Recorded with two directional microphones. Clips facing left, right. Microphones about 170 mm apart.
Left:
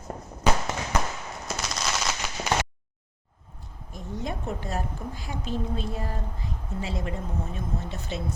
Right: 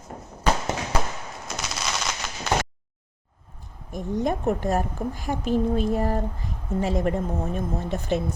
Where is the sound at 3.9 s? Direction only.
50° right (ahead or behind).